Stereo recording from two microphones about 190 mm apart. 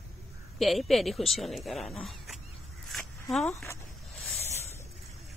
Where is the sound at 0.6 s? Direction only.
Centre (ahead or behind).